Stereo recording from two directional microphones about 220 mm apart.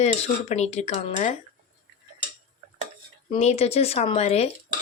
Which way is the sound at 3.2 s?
30° left (ahead or behind).